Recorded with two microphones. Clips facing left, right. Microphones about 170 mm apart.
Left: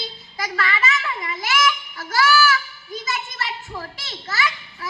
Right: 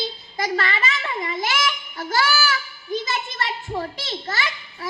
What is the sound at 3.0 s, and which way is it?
Children playing, 30° right (ahead or behind).